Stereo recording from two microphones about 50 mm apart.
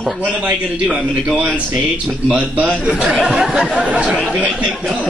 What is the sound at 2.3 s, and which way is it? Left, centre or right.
A man's voice, right.